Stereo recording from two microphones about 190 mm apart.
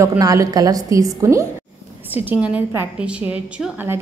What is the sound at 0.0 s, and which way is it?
A woman's voice, 15° right (ahead or behind).